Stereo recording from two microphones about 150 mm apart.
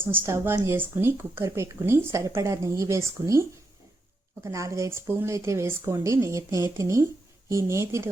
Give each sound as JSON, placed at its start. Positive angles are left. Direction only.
{"t": 0.0, "sound": "speech", "side_deg": -15}